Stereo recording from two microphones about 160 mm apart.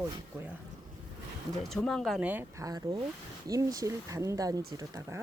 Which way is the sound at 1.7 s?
5° left (ahead or behind).